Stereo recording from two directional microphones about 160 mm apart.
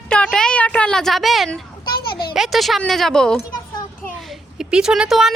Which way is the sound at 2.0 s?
75° left (ahead or behind).